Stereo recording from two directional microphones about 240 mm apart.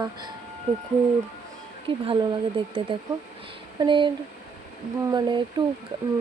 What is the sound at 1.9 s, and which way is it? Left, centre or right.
Speech, right.